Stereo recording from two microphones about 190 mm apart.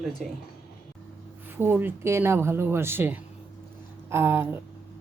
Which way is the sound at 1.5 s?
10° right (ahead or behind).